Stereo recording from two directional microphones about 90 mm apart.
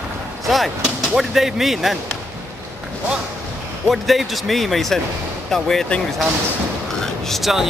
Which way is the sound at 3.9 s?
Centre (ahead or behind).